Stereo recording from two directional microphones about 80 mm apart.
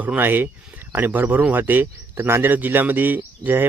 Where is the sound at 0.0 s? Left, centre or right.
Right.